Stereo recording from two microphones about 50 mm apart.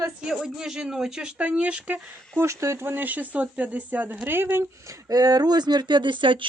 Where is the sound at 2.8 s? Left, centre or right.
Right.